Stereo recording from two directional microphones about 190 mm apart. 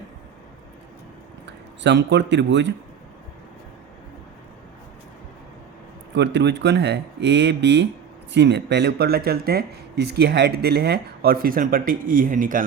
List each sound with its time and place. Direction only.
1.5 s speech: 65° right (ahead or behind)
6.1 s speech: 65° right (ahead or behind); by 12.6 s 45° right (ahead or behind)